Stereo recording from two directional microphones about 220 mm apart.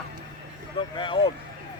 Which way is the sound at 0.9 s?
20° left (ahead or behind).